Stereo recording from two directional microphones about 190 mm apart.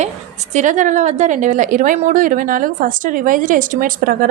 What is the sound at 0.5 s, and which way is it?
Speech, 40° right (ahead or behind).